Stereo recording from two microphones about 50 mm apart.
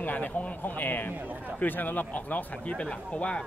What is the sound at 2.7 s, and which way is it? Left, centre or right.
Speech, left.